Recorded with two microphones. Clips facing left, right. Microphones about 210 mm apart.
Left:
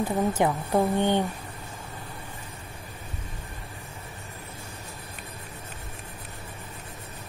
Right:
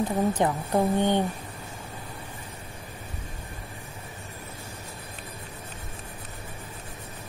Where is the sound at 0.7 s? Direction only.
15° right (ahead or behind).